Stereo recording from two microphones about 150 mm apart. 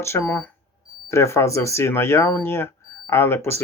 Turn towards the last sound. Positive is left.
turn(degrees=15)  # may be behind; listen again after turning